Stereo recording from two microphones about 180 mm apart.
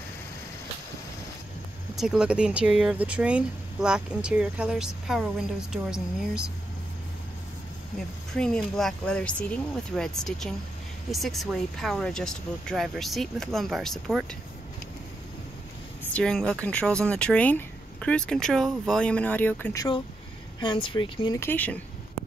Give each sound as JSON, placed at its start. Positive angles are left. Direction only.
{"t": 2.0, "sound": "speech", "side_deg": -5}
{"t": 8.3, "sound": "speech", "side_deg": 5}
{"t": 16.1, "sound": "speech", "side_deg": 5}
{"t": 21.4, "sound": "speech", "side_deg": 10}